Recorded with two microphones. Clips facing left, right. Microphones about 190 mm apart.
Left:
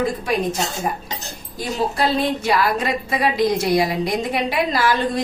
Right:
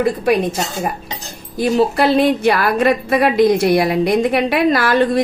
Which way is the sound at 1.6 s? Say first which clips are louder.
Right 7 dB; 65° right (ahead or behind).